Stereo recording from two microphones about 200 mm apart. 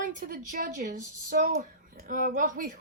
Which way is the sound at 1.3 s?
50° right (ahead or behind).